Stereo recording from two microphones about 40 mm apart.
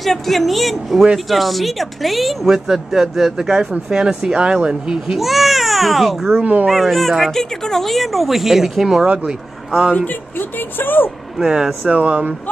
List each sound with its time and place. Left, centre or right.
0.0 s speech: centre
3.9 s speech: right
5.2 s speech: centre
6.4 s speech: right
6.7 s speech: centre
9.0 s speech: right
9.7 s speech: right
10.8 s speech: left
11.3 s speech: centre
11.9 s speech: right